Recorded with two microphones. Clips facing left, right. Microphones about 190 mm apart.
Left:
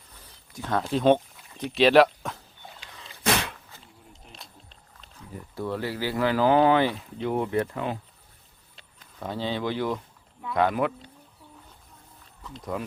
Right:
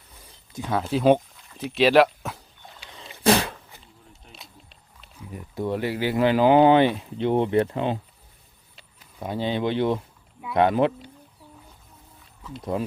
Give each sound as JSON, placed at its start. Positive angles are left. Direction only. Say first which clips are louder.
{"t": 0.7, "sound": "speech", "louder": "right 2 dB", "side_deg": -5}
{"t": 3.0, "sound": "sneeze", "louder": "right 6 dB", "side_deg": -30}
{"t": 4.3, "sound": "speech", "louder": "right 2 dB", "side_deg": -5}
{"t": 8.7, "sound": "a sound", "louder": "right 1 dB", "side_deg": -10}
{"t": 10.5, "sound": "speech", "louder": "right 4 dB", "side_deg": -25}
{"t": 12.4, "sound": "a sound", "louder": "right 4 dB", "side_deg": -5}